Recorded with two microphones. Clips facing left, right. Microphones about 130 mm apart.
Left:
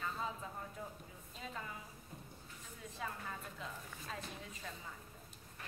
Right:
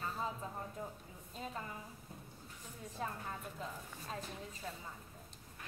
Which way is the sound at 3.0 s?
40° right (ahead or behind).